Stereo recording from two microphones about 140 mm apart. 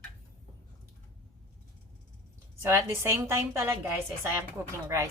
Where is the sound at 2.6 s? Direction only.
20° right (ahead or behind).